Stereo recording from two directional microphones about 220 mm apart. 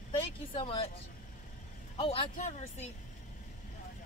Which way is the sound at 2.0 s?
30° left (ahead or behind).